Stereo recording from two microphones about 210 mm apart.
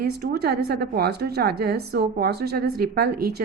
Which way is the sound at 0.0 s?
50° right (ahead or behind).